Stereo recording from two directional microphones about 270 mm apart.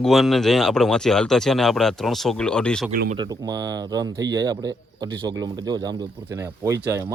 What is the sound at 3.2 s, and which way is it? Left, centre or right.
Speech, centre.